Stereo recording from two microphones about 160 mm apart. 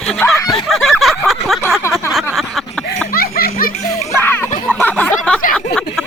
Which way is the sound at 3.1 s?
70° left (ahead or behind).